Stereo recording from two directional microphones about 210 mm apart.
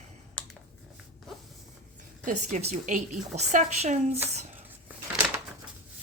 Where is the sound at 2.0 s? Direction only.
35° right (ahead or behind).